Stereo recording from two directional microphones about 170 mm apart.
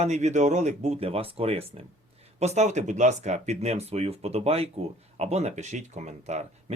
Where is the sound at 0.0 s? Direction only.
40° right (ahead or behind).